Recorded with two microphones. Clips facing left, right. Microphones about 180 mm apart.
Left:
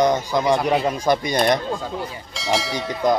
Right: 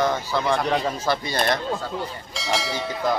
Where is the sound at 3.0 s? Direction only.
20° left (ahead or behind).